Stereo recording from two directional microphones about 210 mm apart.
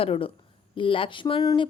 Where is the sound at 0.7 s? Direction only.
25° left (ahead or behind).